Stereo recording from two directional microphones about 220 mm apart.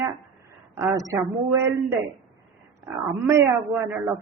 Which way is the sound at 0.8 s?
15° right (ahead or behind).